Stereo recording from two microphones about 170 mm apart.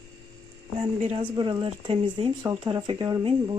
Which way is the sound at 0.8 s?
35° right (ahead or behind).